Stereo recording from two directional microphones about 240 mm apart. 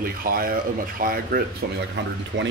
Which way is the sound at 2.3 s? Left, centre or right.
Right.